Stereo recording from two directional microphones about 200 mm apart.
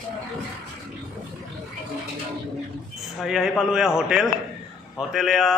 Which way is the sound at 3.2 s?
Centre (ahead or behind).